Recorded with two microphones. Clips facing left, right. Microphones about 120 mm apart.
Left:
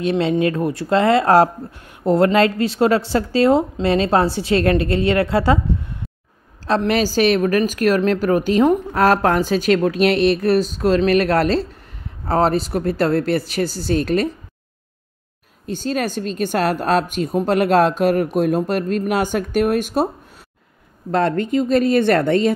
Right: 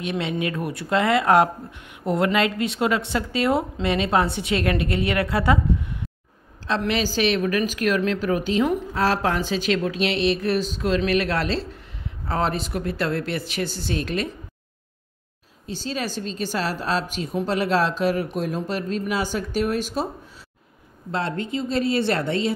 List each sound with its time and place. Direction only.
0.0 s a woman's voice: 30° left (ahead or behind)
6.7 s a woman's voice: 45° left (ahead or behind)
15.6 s a woman's voice: 50° left (ahead or behind)
21.1 s speech: 55° left (ahead or behind)